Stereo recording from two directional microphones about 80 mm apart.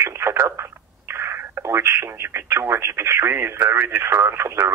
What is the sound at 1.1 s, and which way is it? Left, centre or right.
Speech, right.